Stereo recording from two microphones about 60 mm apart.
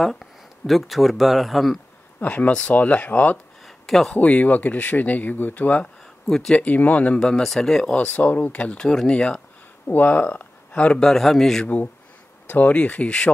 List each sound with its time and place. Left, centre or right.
0.0 s speech: centre
2.1 s speech: left
3.6 s a sound: centre
4.1 s speech: left
6.2 s speech: centre
6.5 s speech: left
7.2 s speech: centre
8.1 s speech: left
8.8 s speech: centre
9.8 s speech: left; by 11.6 s centre
11.6 s speech: left